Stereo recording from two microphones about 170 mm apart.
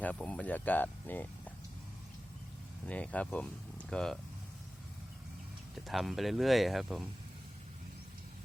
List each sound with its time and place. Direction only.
0.0 s speech: 10° left (ahead or behind)
2.8 s speech: 10° left (ahead or behind)
5.7 s speech: centre (ahead or behind)